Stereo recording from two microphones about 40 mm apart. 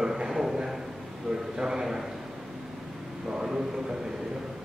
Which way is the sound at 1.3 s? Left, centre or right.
Centre.